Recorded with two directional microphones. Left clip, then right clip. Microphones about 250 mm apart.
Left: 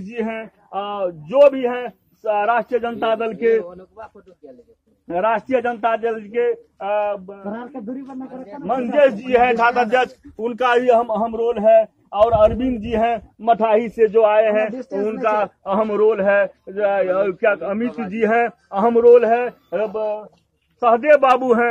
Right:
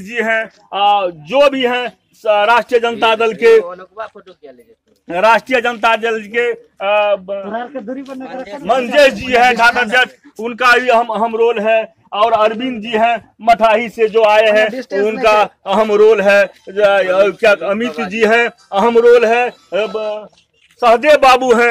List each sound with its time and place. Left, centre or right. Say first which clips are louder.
0.0 s a man's voice: right 10 dB; right
8.6 s a man's voice: right 5 dB; right
9.3 s a man's voice: right 5 dB; centre
9.6 s a man's voice: right 5 dB; left
13.6 s a man's voice: right 5 dB; centre
13.9 s speech: right 2 dB; centre
14.2 s a man's voice: right 5 dB; right